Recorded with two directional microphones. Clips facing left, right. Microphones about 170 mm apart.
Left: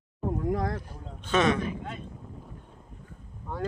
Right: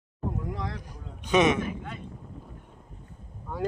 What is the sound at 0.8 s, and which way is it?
Speech, 15° right (ahead or behind).